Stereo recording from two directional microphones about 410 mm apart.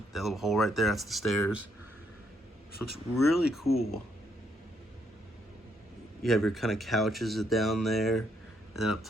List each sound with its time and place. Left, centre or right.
0.1 s speech: centre
2.9 s speech: centre
6.2 s speech: centre